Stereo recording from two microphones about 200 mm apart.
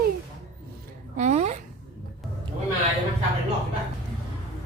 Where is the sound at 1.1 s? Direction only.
35° right (ahead or behind).